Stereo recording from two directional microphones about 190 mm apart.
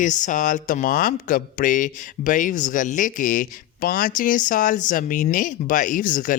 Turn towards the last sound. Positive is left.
turn(degrees=45)  # may be behind; listen again after turning